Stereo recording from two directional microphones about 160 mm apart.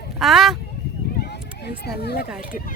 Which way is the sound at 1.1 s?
85° left.